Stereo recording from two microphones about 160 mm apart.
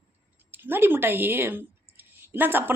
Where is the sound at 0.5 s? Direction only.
10° right (ahead or behind).